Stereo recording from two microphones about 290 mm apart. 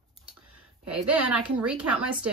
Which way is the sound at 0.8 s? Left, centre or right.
Right.